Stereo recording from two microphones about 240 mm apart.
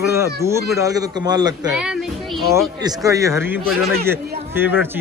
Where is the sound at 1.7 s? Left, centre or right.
Centre.